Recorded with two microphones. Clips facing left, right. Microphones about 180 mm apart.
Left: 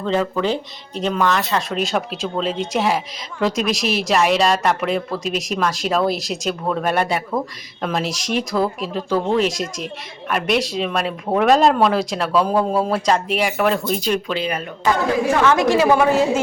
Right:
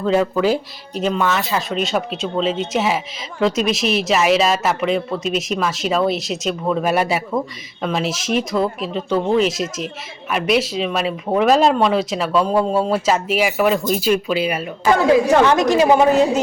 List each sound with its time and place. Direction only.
0.0 s speech: 5° right (ahead or behind)
15.4 s a woman's voice: 20° right (ahead or behind)